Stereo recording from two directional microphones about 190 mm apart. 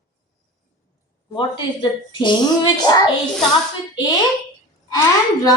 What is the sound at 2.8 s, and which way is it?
Speech, 20° left (ahead or behind).